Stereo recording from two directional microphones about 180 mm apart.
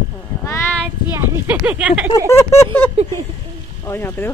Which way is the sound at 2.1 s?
20° left (ahead or behind).